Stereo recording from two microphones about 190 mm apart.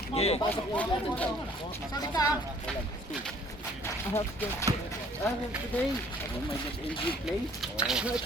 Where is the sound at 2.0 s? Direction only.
20° left (ahead or behind).